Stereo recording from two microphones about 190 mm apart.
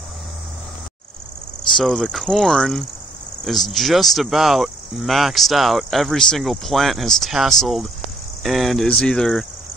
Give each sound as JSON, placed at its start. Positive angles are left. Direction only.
{"t": 1.7, "sound": "speech", "side_deg": 0}